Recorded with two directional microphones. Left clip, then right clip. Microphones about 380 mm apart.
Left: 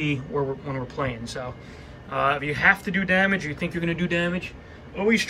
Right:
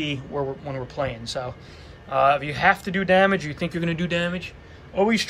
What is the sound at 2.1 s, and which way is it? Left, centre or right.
Speech, centre.